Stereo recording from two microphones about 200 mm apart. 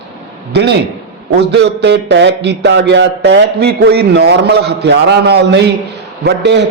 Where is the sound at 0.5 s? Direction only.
55° right (ahead or behind).